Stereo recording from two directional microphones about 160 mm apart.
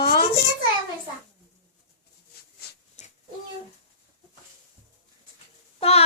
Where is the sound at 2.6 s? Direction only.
85° left.